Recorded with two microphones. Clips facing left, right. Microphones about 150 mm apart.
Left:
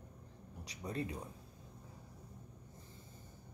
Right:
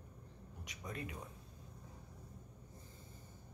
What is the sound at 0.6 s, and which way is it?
Speech, 35° left (ahead or behind).